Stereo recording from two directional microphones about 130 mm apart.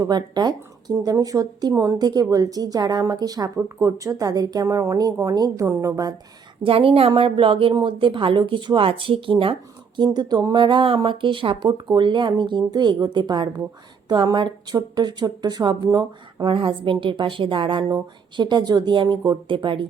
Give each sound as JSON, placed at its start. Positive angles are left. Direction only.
{"t": 0.0, "sound": "speech", "side_deg": -30}
{"t": 6.6, "sound": "a woman's voice", "side_deg": -45}